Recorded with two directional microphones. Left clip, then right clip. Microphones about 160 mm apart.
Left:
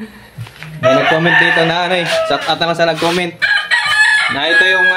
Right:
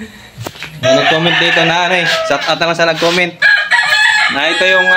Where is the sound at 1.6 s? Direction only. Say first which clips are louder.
Right 3 dB; 10° right (ahead or behind).